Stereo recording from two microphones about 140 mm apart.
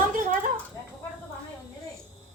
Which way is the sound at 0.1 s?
65° right (ahead or behind).